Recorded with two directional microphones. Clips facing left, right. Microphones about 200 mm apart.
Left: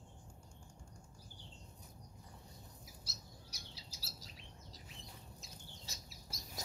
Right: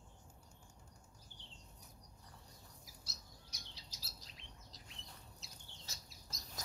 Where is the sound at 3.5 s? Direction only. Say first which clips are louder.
Left 3 dB; 5° left (ahead or behind).